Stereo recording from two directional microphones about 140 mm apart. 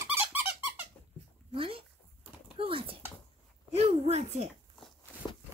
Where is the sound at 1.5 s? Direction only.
40° right (ahead or behind).